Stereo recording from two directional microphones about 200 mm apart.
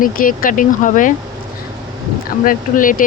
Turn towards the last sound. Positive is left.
turn(degrees=40)  # may be behind; listen again after turning